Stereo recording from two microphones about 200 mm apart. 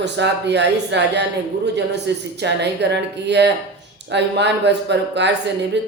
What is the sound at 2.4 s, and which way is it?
A man's voice, 60° right (ahead or behind).